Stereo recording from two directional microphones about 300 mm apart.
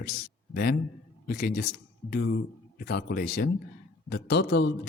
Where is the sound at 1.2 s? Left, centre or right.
Left.